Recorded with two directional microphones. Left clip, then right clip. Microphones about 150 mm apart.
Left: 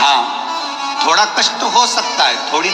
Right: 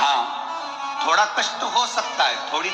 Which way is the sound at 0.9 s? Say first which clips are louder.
Left 6 dB; 40° left (ahead or behind).